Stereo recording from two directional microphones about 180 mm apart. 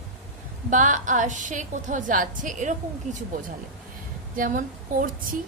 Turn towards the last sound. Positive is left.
turn(degrees=-50)  # may be behind; listen again after turning